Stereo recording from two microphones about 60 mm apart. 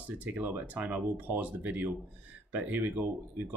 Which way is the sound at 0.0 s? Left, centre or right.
Right.